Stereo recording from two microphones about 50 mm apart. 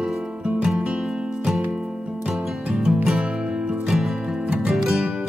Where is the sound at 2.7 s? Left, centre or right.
Centre.